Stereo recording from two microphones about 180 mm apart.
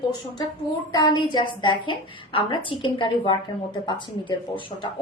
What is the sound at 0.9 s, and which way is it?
A woman's voice, 25° left (ahead or behind).